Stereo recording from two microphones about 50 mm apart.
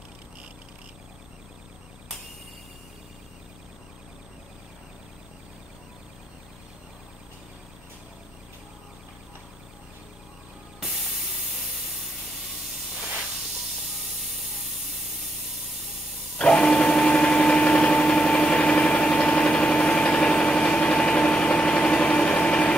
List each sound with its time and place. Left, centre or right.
10.8 s spray: centre
13.9 s spray: centre
16.3 s blender: centre